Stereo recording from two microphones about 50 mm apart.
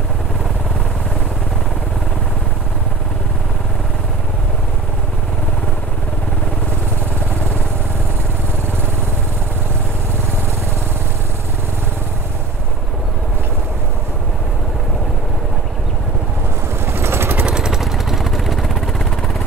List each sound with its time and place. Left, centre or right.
16.8 s vehicle: right
17.5 s vehicle: centre